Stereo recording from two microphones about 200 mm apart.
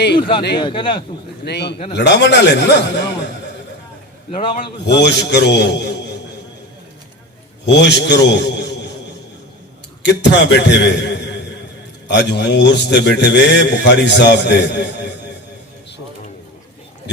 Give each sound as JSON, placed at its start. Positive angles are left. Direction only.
{"t": 0.2, "sound": "speech", "side_deg": 25}
{"t": 1.5, "sound": "a man's voice", "side_deg": 55}
{"t": 4.3, "sound": "a man's voice", "side_deg": 30}
{"t": 4.9, "sound": "a man's voice", "side_deg": 60}
{"t": 7.6, "sound": "a man's voice", "side_deg": 60}
{"t": 10.0, "sound": "a man's voice", "side_deg": 60}